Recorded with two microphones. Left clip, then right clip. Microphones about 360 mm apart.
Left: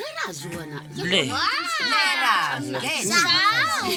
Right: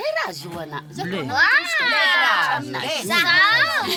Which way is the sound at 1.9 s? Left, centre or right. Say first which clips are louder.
Right 2 dB; right.